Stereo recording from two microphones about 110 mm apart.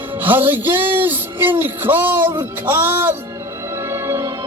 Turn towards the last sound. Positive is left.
turn(degrees=-25)  # may be behind; listen again after turning